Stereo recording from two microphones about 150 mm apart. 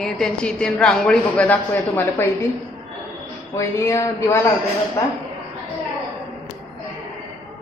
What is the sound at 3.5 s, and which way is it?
Speech, 20° left (ahead or behind).